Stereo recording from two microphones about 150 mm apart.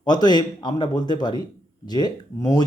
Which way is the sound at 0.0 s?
30° left (ahead or behind).